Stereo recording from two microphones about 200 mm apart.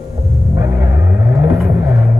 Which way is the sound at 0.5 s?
10° right (ahead or behind).